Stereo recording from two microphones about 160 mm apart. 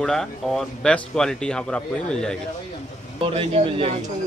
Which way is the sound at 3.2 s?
35° right (ahead or behind).